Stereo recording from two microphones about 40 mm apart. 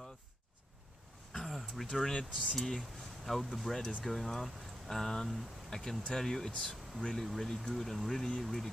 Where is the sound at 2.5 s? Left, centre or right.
Centre.